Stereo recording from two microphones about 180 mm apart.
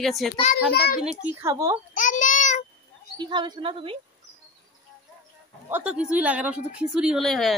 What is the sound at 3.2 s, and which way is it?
Speech, 25° right (ahead or behind).